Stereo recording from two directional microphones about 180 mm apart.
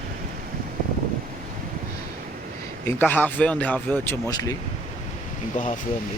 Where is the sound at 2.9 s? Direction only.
10° left (ahead or behind).